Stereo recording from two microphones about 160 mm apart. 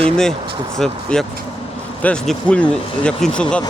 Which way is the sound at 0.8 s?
5° left (ahead or behind).